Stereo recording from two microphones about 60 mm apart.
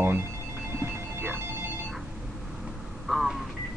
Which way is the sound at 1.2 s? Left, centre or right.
Right.